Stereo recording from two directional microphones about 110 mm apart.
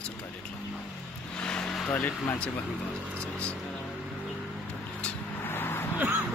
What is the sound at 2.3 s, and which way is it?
Speech, 10° left (ahead or behind).